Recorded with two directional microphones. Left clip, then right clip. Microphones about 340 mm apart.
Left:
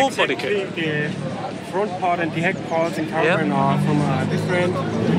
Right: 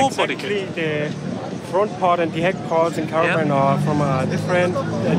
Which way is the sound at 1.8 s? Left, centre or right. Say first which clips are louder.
Right 3 dB; right.